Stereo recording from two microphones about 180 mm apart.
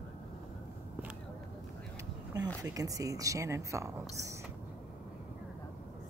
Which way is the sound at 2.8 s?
20° right (ahead or behind).